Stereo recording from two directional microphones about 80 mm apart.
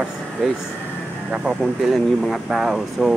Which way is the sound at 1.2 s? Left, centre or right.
Centre.